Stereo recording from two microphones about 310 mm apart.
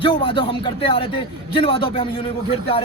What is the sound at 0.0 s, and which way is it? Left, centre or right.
A man's voice, centre.